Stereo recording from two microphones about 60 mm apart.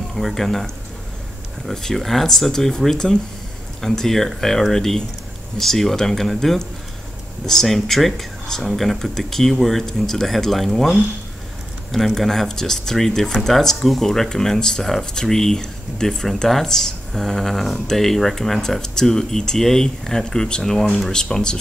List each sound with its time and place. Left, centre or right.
0.1 s speech: centre
1.7 s speech: centre